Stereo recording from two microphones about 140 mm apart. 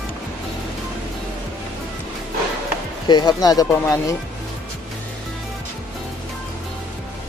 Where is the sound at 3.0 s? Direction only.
30° left (ahead or behind).